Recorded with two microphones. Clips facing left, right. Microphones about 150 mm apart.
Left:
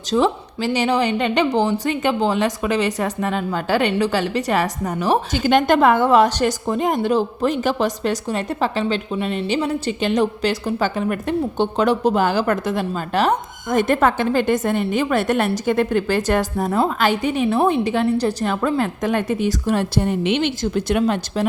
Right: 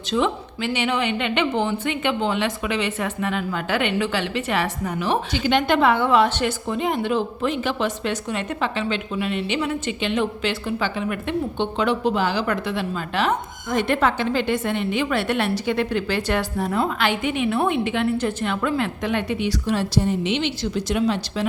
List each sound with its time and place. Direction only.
0.1 s a woman's voice: 40° left (ahead or behind); by 21.4 s 55° left (ahead or behind)